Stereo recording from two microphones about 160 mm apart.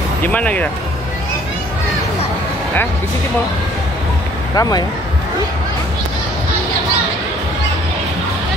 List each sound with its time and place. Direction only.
0.2 s speech: 10° left (ahead or behind)
4.6 s speech: 25° left (ahead or behind)